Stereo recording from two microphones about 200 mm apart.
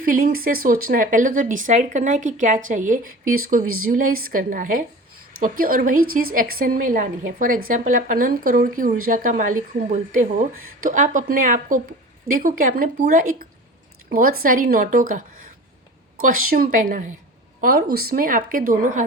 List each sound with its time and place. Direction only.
0.0 s a woman's voice: 45° right (ahead or behind)
3.7 s speech: 90° right
3.9 s a woman's voice: 45° right (ahead or behind)
16.5 s a woman's voice: 45° right (ahead or behind)